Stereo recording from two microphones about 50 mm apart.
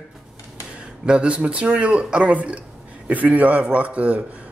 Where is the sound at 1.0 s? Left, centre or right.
Centre.